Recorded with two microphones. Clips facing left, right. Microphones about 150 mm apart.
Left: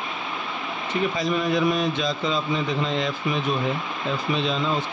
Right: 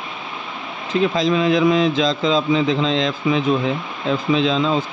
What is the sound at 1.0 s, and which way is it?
A man's voice, 90° right.